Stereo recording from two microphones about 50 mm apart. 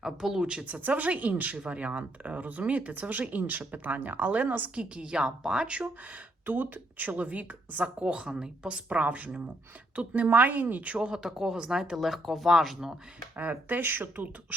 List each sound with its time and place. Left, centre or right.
0.0 s speech: centre
0.6 s speech: right
4.7 s a woman's voice: right
6.4 s a woman's voice: right
11.2 s speech: centre
11.9 s speech: centre
13.3 s speech: right